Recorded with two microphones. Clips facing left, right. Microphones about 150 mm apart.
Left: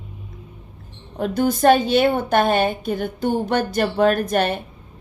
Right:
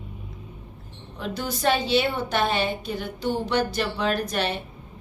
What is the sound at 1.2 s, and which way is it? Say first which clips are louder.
A woman's voice: left 10 dB; 50° left (ahead or behind).